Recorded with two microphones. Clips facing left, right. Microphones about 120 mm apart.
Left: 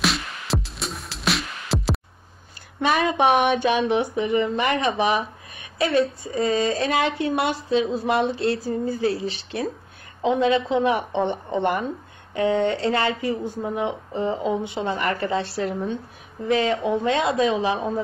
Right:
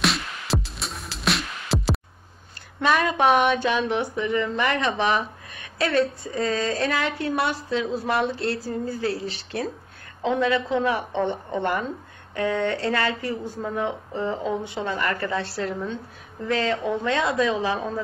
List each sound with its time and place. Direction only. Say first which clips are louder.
0.0 s music: even; centre (ahead or behind)
2.8 s speech: left 1 dB; 15° left (ahead or behind)